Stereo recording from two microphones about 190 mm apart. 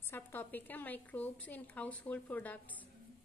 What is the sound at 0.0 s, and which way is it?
A woman's voice, 10° left (ahead or behind).